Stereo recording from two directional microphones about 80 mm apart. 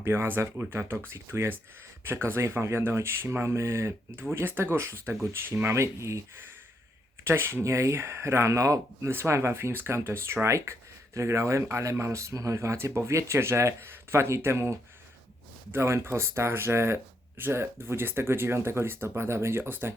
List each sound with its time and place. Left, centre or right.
0.0 s speech: right
7.3 s speech: right